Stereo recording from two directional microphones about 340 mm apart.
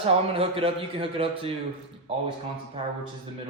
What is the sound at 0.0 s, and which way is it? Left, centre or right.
A man's voice, centre.